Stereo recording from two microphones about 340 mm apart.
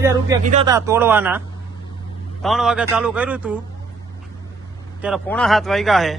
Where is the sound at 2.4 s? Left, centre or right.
Centre.